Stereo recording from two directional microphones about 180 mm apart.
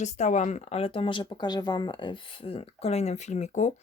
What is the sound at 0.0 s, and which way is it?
Speech, 40° left (ahead or behind).